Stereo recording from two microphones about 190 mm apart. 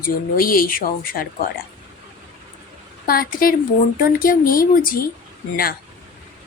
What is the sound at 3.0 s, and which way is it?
Speech, 50° left (ahead or behind).